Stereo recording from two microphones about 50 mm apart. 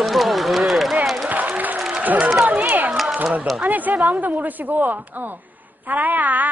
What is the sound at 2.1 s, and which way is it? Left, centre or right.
Run, centre.